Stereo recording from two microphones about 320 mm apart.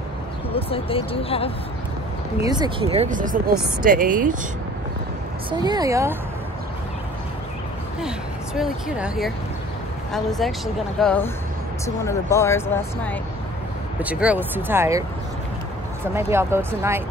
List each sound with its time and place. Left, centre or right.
0.5 s speech: centre
2.4 s speech: centre
5.5 s speech: centre
8.5 s speech: centre
14.0 s speech: centre
16.2 s speech: centre